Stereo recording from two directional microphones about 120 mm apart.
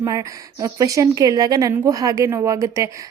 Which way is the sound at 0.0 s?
25° right (ahead or behind).